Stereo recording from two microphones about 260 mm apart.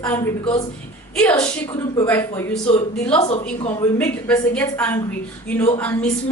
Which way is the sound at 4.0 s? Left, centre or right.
Centre.